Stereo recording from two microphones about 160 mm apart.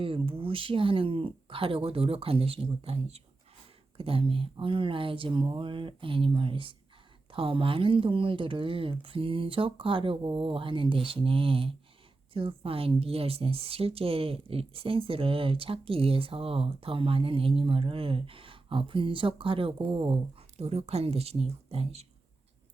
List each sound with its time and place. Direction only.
0.0 s a woman's voice: 35° right (ahead or behind)